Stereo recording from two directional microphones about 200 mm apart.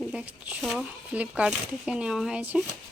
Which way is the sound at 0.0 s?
5° right (ahead or behind).